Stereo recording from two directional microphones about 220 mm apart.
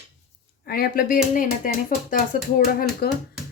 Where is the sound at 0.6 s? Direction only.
45° left (ahead or behind).